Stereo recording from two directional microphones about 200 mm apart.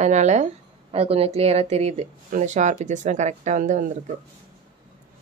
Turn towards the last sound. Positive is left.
turn(degrees=-35)  # may be behind; listen again after turning